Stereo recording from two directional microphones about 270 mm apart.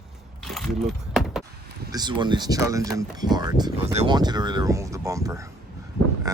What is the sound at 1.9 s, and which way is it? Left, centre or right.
Speech, centre.